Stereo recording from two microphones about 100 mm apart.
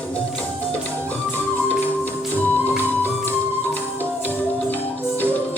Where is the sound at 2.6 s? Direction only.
20° left (ahead or behind).